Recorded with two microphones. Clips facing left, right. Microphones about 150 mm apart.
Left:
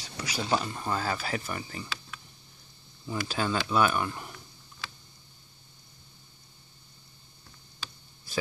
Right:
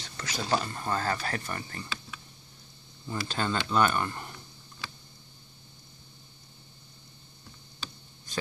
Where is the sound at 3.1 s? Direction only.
5° left (ahead or behind).